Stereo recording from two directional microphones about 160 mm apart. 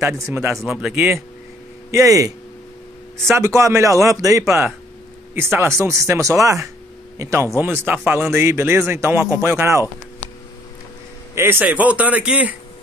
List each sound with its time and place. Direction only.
0.0 s speech: 15° right (ahead or behind)
0.6 s speech: centre (ahead or behind)
1.9 s speech: 20° right (ahead or behind)
11.3 s speech: 15° right (ahead or behind)